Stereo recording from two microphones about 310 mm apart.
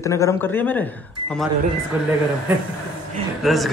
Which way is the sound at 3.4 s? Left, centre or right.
Centre.